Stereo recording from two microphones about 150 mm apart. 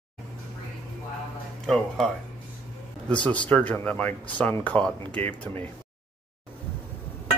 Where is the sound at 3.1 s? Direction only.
5° left (ahead or behind).